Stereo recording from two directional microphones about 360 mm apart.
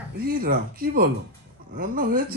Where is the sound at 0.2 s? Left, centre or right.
Right.